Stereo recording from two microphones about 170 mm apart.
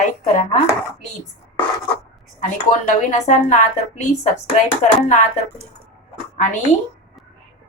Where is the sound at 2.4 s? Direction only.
45° left (ahead or behind).